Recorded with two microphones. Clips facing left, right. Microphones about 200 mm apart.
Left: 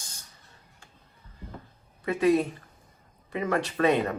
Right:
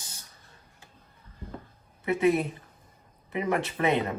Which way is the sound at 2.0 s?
20° right (ahead or behind).